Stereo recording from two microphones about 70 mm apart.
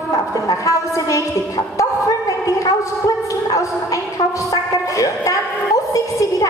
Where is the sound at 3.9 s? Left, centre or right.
Left.